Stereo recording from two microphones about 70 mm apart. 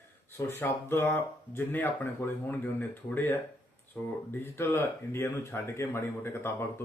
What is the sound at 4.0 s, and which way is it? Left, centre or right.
Speech, centre.